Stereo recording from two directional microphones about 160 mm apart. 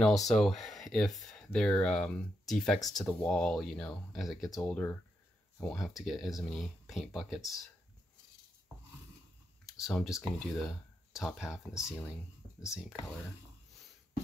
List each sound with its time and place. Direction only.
0.0 s speech: centre (ahead or behind)
9.7 s speech: centre (ahead or behind)